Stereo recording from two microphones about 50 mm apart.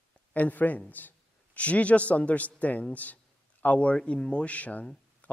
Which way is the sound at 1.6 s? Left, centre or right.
Left.